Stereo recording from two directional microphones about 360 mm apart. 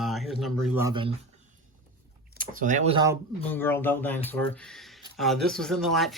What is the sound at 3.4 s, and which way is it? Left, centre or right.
Speech, centre.